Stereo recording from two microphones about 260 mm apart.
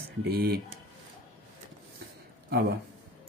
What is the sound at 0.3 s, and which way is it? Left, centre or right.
Speech, right.